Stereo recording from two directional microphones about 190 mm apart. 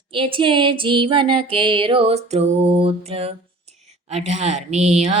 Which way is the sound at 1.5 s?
25° right (ahead or behind).